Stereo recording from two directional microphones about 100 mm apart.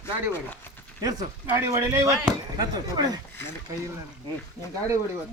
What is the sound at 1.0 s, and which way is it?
Speech, 40° right (ahead or behind).